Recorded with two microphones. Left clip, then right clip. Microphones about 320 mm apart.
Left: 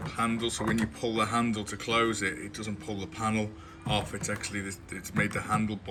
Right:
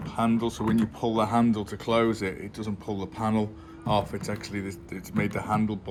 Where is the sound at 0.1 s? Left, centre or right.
Centre.